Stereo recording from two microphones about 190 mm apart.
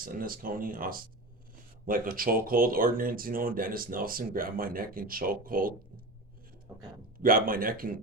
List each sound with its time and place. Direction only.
0.0 s speech: 50° right (ahead or behind)
7.2 s speech: 50° right (ahead or behind)